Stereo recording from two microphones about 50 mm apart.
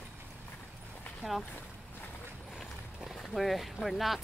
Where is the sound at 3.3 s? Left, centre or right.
Centre.